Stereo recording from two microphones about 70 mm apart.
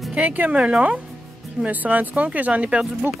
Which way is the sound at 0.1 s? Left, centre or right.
Right.